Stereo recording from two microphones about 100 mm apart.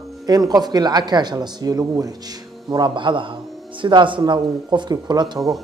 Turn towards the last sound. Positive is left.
turn(degrees=-40)  # may be behind; listen again after turning